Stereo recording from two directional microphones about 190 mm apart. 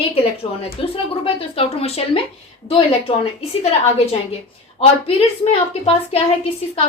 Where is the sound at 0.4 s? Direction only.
30° left (ahead or behind).